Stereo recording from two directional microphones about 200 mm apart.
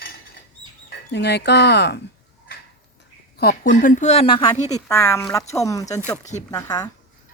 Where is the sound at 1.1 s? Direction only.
55° left (ahead or behind).